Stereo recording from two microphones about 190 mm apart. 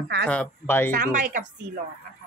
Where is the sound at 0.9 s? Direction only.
45° right (ahead or behind).